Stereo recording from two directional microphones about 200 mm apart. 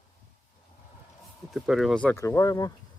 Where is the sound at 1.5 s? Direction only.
Centre (ahead or behind).